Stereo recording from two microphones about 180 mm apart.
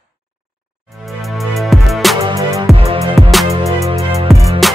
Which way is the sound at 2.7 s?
35° right (ahead or behind).